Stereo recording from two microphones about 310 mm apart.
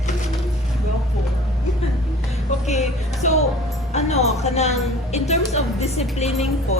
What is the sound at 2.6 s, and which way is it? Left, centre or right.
A woman's voice, left.